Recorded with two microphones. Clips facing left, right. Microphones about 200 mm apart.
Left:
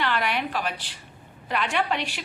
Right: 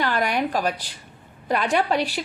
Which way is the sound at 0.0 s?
45° right (ahead or behind).